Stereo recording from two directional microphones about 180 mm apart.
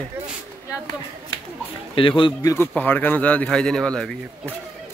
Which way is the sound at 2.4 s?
15° left (ahead or behind).